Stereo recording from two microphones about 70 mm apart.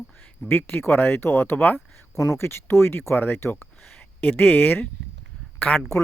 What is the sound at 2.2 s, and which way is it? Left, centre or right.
Speech, left.